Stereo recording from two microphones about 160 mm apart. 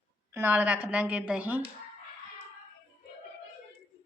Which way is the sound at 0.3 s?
10° right (ahead or behind).